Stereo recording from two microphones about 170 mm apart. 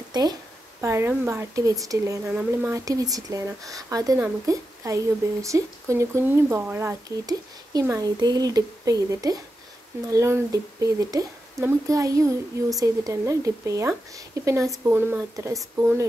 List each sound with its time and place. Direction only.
0.1 s speech: 25° right (ahead or behind)
2.2 s speech: 5° right (ahead or behind)
2.7 s speech: 20° right (ahead or behind)